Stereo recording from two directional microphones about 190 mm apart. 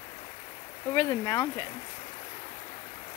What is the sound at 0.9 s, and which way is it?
Speech, 15° left (ahead or behind).